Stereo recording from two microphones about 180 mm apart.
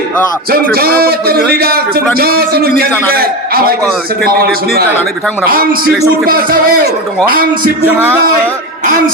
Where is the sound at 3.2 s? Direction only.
55° right (ahead or behind).